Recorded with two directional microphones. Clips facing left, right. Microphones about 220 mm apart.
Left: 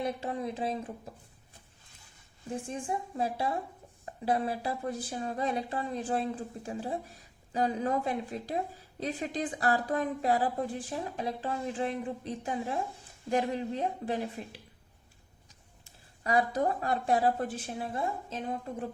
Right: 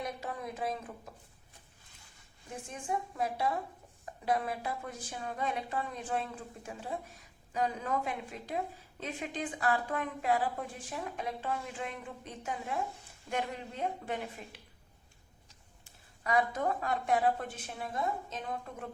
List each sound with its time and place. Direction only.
0.0 s a woman's voice: 30° left (ahead or behind)
2.6 s a woman's voice: 30° left (ahead or behind)
16.2 s speech: 35° left (ahead or behind)